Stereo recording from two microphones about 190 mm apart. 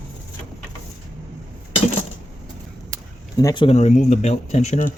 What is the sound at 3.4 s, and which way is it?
Speech, 20° left (ahead or behind).